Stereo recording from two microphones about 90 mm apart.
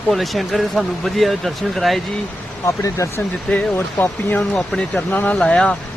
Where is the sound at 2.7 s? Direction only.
35° left (ahead or behind).